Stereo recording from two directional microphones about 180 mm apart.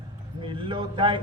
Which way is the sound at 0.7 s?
25° right (ahead or behind).